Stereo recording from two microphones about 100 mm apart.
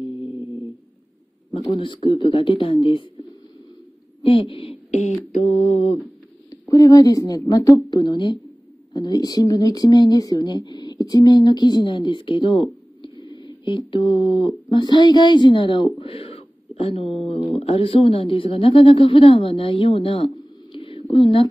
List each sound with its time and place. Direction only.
1.8 s speech: 50° left (ahead or behind)
4.2 s speech: 65° left (ahead or behind)
5.4 s mantra: 90° left
6.7 s speech: 35° left (ahead or behind)
7.9 s speech: 50° left (ahead or behind); by 20.2 s 65° left (ahead or behind)
20.7 s a sound: 65° left (ahead or behind)